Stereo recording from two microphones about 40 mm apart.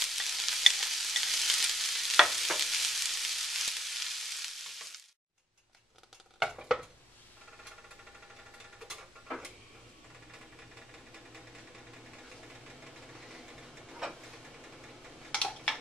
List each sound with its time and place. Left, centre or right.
0.0 s frying: centre
6.4 s stir: centre
8.7 s a sound: centre
12.6 s vehicle: centre
13.8 s a sound: centre
14.3 s engine: centre